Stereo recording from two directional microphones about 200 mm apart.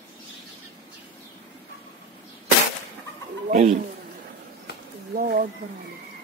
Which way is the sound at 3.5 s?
35° right (ahead or behind).